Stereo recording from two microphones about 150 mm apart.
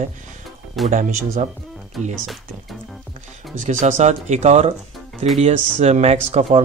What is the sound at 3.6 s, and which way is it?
Speech, 55° right (ahead or behind).